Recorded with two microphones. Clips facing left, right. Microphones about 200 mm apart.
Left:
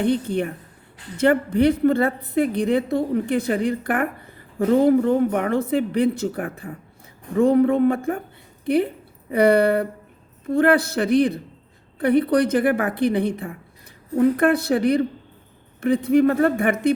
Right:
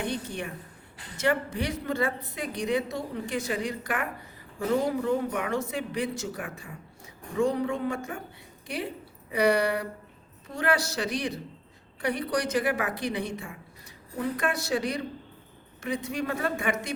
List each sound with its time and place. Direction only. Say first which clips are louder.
0.0 s a woman's voice: left 11 dB; 60° left (ahead or behind)